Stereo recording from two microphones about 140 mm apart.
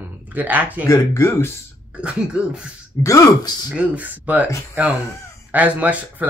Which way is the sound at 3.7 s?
10° right (ahead or behind).